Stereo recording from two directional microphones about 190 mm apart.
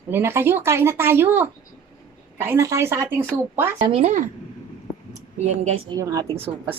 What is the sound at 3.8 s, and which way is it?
Speech, 30° right (ahead or behind).